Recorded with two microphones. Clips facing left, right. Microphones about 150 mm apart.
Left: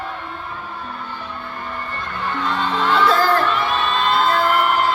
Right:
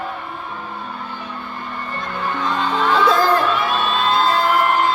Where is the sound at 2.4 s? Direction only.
10° right (ahead or behind).